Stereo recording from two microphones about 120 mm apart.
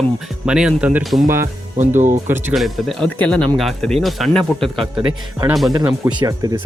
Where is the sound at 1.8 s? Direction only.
90° right.